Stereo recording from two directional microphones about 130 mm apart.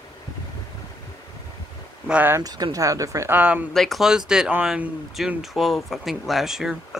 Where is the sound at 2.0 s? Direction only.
15° right (ahead or behind).